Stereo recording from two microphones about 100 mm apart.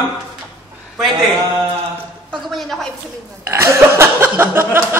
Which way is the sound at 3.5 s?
30° right (ahead or behind).